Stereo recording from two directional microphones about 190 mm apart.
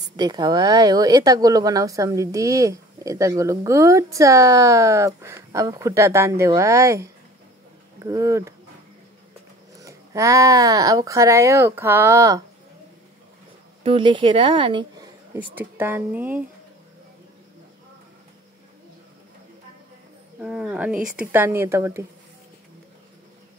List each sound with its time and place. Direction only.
0.1 s speech: 20° right (ahead or behind)
9.8 s speech: 15° right (ahead or behind)
13.8 s speech: 25° right (ahead or behind)
15.3 s speech: 10° right (ahead or behind)
20.3 s speech: 5° right (ahead or behind)